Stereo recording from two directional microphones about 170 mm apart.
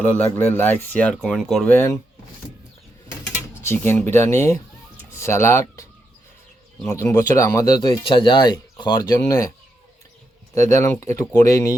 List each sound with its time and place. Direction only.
0.3 s speech: 10° left (ahead or behind)
3.6 s speech: 15° left (ahead or behind)
6.8 s speech: 15° left (ahead or behind)
10.5 s speech: 20° left (ahead or behind)